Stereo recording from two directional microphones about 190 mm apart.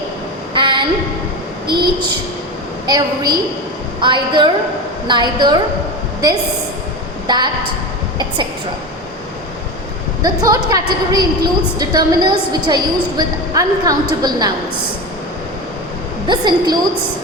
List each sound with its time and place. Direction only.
0.5 s a sound: 25° right (ahead or behind)
1.8 s a woman's voice: 25° right (ahead or behind)
7.3 s a woman's voice: 25° right (ahead or behind)
10.2 s a woman's voice: 20° right (ahead or behind)
16.2 s a woman's voice: 25° right (ahead or behind)